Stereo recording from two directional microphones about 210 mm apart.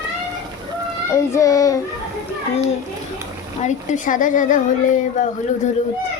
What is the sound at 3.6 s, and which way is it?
A woman's voice, 35° left (ahead or behind).